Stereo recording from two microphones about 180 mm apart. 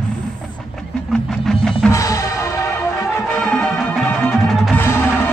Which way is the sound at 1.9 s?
15° left (ahead or behind).